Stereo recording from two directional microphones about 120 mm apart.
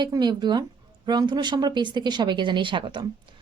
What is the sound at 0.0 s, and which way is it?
Speech, 35° right (ahead or behind).